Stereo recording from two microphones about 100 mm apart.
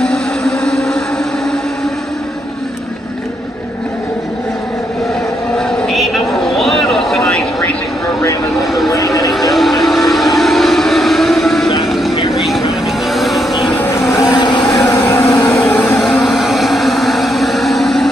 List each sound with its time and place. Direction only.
0.0 s a sound: 5° left (ahead or behind)
5.8 s vehicle: centre (ahead or behind)
8.9 s vehicle: 35° left (ahead or behind)
9.3 s vehicle: centre (ahead or behind)
13.7 s vehicle: 25° left (ahead or behind)
14.3 s vehicle: 50° left (ahead or behind)
14.7 s vehicle: 35° left (ahead or behind)
16.0 s vehicle: 5° left (ahead or behind)